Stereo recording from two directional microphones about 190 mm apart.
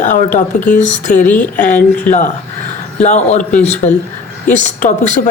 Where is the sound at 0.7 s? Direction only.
40° left (ahead or behind).